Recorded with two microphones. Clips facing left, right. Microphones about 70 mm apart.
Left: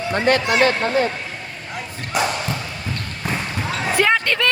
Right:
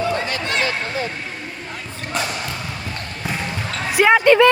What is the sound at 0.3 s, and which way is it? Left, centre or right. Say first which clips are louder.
Speech: left 10 dB; left.